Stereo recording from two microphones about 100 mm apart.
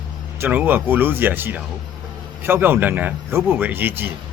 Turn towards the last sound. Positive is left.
turn(degrees=-20)  # may be behind; listen again after turning